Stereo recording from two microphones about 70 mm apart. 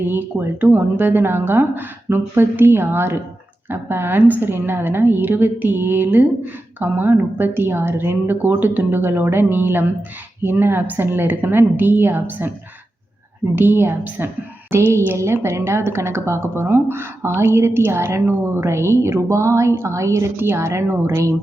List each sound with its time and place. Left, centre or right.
0.0 s a woman's voice: right
13.6 s a woman's voice: right
20.3 s a woman's voice: right